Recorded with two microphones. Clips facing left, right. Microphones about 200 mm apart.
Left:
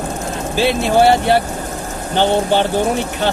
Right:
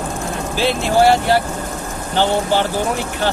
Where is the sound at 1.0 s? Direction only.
20° left (ahead or behind).